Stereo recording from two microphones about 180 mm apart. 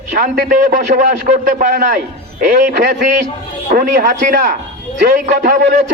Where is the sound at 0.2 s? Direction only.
50° right (ahead or behind).